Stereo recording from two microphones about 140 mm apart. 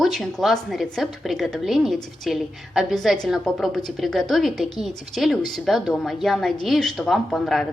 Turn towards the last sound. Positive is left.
turn(degrees=5)  # may be behind; listen again after turning